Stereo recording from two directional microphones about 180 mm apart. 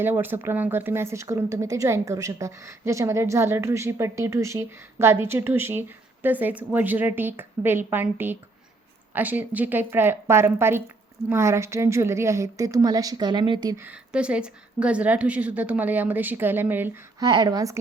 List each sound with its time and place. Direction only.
0.0 s speech: 10° right (ahead or behind)
13.8 s speech: 5° right (ahead or behind)